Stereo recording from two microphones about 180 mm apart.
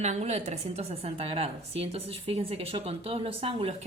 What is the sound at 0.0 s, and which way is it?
A woman's voice, 40° right (ahead or behind).